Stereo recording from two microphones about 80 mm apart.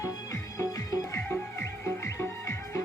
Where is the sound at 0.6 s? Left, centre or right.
Left.